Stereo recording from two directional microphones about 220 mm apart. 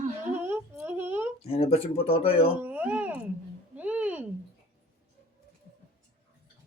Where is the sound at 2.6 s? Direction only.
10° right (ahead or behind).